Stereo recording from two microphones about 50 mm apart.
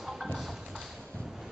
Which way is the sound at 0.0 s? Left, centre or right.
Centre.